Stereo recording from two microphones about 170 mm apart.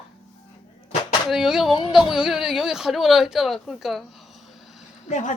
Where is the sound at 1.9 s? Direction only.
Centre (ahead or behind).